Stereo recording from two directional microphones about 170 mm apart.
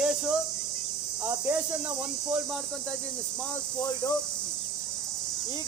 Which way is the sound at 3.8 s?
20° left (ahead or behind).